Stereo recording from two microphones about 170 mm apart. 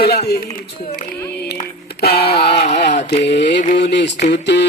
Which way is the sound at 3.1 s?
75° left (ahead or behind).